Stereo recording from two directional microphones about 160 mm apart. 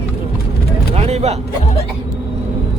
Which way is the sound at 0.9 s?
40° right (ahead or behind).